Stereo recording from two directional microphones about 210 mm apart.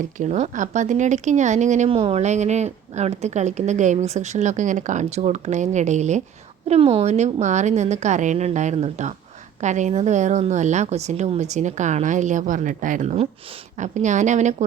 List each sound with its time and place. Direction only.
0.2 s speech: 35° right (ahead or behind)